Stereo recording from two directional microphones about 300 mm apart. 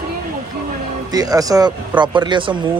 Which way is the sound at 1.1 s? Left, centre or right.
Centre.